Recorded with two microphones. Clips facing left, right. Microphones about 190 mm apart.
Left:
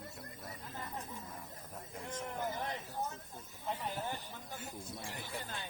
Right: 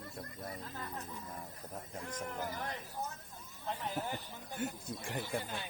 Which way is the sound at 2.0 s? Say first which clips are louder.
Left 2 dB; 20° left (ahead or behind).